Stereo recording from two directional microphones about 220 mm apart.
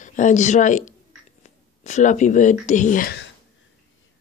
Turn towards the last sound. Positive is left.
turn(degrees=45)  # may be behind; listen again after turning